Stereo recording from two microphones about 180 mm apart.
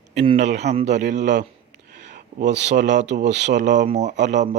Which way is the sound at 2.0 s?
45° right (ahead or behind).